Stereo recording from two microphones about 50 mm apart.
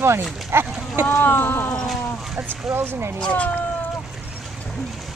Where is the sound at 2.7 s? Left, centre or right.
Right.